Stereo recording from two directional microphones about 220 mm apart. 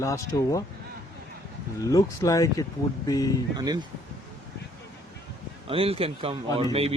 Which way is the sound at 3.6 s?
15° right (ahead or behind).